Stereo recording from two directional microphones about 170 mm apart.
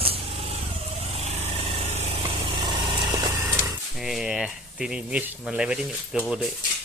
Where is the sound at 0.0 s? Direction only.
35° right (ahead or behind).